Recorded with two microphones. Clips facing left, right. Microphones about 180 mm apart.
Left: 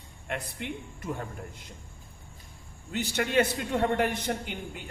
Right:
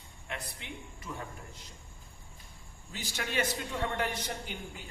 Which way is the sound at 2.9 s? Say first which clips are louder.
Left 9 dB; 65° left (ahead or behind).